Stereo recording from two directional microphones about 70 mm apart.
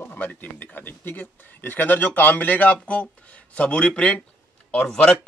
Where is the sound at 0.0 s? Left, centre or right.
Left.